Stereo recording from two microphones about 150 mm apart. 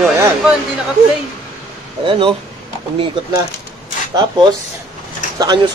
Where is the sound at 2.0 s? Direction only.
35° right (ahead or behind).